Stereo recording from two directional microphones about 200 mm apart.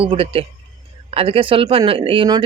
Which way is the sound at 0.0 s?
30° right (ahead or behind).